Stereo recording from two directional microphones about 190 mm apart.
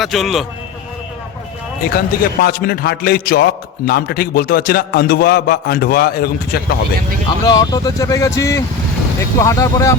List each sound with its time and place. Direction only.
0.0 s a man's voice: centre (ahead or behind)
1.8 s a man's voice: 50° left (ahead or behind)
7.4 s speech: 20° left (ahead or behind)